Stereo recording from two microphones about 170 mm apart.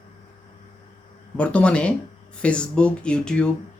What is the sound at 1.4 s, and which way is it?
Speech, 5° left (ahead or behind).